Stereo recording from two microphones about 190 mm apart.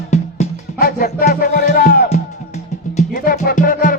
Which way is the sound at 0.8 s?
50° left (ahead or behind).